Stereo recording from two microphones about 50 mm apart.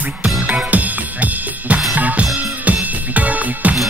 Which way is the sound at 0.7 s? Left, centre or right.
Right.